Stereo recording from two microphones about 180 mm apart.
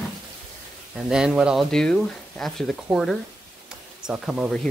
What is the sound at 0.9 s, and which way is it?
Speech, 5° right (ahead or behind).